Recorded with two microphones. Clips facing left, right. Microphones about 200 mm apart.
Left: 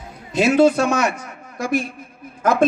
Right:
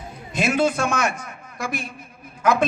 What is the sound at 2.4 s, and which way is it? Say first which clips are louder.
Speech: left 3 dB; 50° left (ahead or behind).